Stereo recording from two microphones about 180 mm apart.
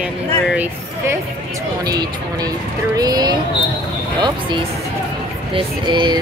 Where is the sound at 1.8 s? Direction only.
20° right (ahead or behind).